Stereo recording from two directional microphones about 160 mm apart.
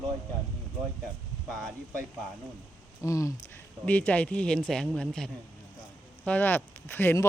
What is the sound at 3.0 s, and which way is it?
Speech, 20° left (ahead or behind).